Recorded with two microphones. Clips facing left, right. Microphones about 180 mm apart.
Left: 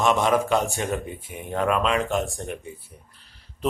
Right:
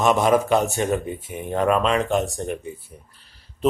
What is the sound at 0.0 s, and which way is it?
Speech, 5° right (ahead or behind).